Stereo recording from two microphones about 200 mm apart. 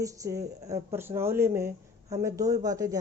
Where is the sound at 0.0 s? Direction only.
15° right (ahead or behind).